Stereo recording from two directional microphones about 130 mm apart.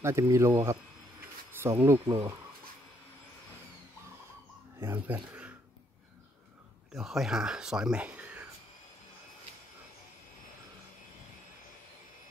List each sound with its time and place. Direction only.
0.0 s speech: 20° right (ahead or behind)
4.7 s speech: 15° right (ahead or behind)
6.9 s speech: centre (ahead or behind)